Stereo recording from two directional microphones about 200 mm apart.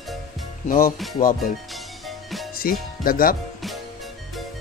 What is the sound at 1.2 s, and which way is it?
Speech, 45° left (ahead or behind).